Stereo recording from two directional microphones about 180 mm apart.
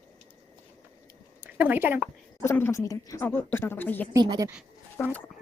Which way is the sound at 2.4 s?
15° left (ahead or behind).